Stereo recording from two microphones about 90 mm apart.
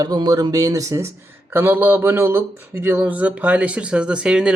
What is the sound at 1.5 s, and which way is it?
Speech, 25° right (ahead or behind).